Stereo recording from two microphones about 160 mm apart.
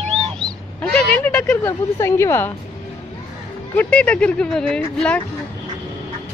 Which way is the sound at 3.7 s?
10° left (ahead or behind).